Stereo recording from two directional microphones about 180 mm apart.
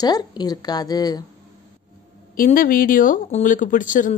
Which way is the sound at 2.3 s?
50° left (ahead or behind).